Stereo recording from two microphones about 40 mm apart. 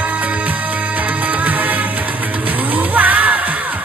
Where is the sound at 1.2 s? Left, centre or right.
Right.